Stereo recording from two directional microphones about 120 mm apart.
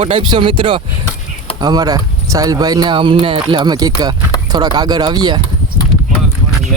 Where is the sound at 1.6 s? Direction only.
30° right (ahead or behind); by 3.4 s 50° right (ahead or behind).